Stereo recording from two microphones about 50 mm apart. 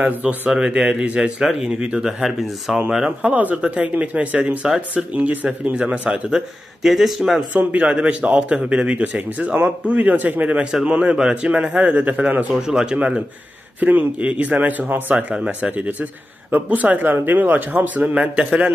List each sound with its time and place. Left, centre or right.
0.0 s speech: right
0.5 s speech: centre
3.2 s speech: right
6.0 s speech: centre
6.8 s speech: centre
7.5 s speech: right
10.6 s speech: centre
10.9 s speech: right
12.5 s speech: centre; by 15.1 s right
15.3 s speech: centre
16.5 s speech: right